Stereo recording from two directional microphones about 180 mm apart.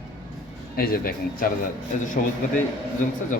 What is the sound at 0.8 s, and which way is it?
A man's voice, 55° left (ahead or behind).